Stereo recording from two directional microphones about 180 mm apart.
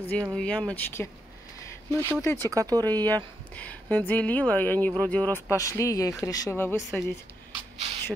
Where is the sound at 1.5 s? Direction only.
15° left (ahead or behind).